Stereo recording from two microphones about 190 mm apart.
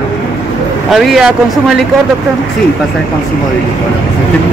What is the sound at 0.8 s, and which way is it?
Speech, centre (ahead or behind).